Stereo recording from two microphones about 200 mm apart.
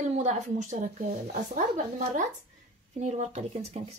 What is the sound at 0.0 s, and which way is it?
Speech, 35° right (ahead or behind).